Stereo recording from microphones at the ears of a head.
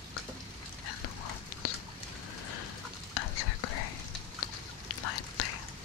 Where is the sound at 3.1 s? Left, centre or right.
Left.